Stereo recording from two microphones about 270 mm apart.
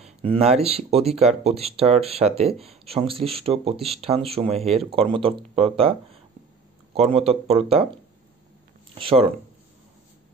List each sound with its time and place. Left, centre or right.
0.0 s speech: right
7.2 s speech: right
8.9 s speech: right